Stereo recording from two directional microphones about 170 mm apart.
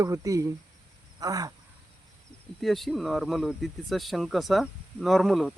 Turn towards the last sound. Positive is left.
turn(degrees=0)  # may be behind; listen again after turning